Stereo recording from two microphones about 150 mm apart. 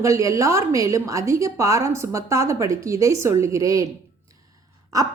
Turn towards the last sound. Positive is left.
turn(degrees=-25)  # may be behind; listen again after turning